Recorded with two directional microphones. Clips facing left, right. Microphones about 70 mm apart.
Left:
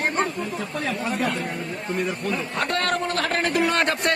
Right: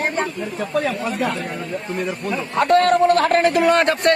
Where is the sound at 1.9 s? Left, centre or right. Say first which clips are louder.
Right 1 dB; centre.